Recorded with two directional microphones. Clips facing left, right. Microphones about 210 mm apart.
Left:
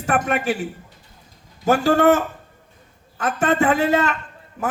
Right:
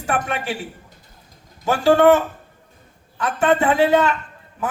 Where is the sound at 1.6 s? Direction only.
40° left (ahead or behind).